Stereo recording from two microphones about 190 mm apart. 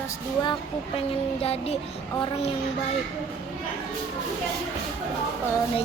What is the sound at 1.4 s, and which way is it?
Child singing, 30° left (ahead or behind).